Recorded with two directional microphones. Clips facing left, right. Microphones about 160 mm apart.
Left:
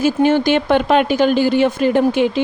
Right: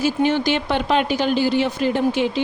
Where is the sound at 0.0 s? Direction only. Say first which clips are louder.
Left 5 dB; 50° left (ahead or behind).